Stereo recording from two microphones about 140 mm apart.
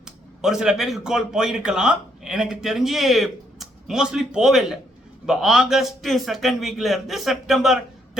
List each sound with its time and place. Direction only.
0.0 s a man's voice: 5° right (ahead or behind)